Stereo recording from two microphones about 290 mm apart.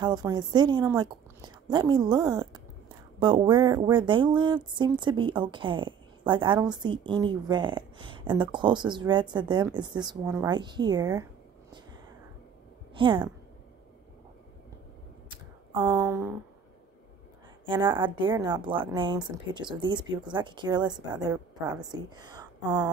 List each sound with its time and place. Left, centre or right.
0.0 s speech: centre
12.9 s a woman's voice: centre
15.8 s speech: centre
17.6 s a woman's voice: centre